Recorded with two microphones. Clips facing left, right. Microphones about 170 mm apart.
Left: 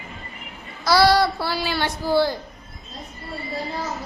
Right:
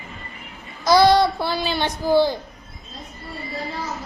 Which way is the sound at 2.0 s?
20° right (ahead or behind).